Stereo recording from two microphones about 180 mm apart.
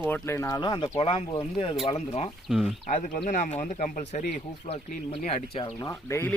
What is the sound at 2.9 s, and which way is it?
Speech, 45° left (ahead or behind).